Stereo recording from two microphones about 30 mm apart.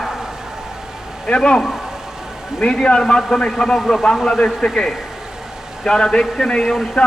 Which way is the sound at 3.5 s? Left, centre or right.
Centre.